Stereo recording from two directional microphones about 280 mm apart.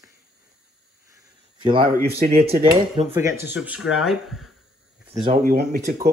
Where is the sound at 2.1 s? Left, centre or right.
Right.